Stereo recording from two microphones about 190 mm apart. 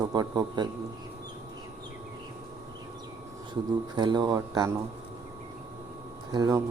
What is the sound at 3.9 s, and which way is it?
Speech, 20° right (ahead or behind).